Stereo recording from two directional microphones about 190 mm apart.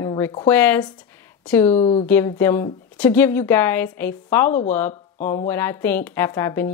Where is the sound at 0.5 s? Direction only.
10° left (ahead or behind).